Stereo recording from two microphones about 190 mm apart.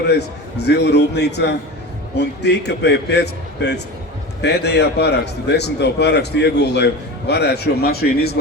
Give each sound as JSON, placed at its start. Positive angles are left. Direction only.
{"t": 0.1, "sound": "a man's voice", "side_deg": 60}